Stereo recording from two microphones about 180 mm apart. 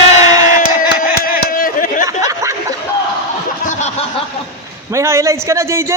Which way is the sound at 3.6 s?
40° left (ahead or behind).